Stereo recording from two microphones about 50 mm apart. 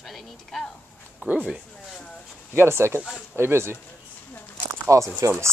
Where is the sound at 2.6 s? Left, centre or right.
Right.